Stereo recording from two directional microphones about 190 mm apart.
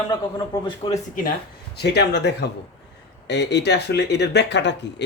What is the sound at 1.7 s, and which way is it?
Speech, 60° left (ahead or behind).